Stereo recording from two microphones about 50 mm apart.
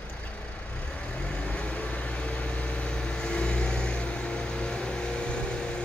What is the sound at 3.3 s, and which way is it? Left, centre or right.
Vehicle, left.